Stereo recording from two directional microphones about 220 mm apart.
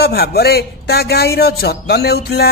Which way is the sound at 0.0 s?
45° left (ahead or behind).